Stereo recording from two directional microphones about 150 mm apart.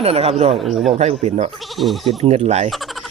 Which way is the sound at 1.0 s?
45° right (ahead or behind).